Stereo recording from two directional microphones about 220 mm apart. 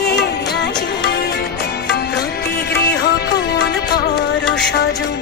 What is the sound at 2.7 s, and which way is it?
Music, 50° left (ahead or behind).